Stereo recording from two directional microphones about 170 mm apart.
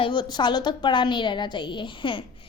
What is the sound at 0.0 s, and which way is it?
A woman's voice, 25° left (ahead or behind).